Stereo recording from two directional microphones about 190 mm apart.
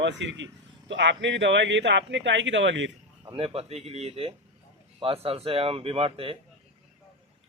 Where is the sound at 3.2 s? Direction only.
30° right (ahead or behind).